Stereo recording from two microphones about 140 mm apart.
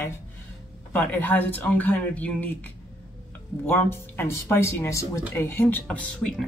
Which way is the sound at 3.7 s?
15° left (ahead or behind).